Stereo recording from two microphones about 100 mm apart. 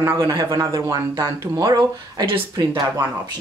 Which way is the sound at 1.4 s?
45° right (ahead or behind).